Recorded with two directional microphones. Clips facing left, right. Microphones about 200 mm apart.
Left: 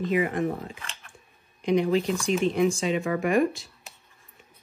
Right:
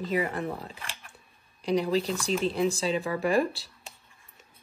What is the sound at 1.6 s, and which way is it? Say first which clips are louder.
Speech: left 3 dB; 35° right (ahead or behind).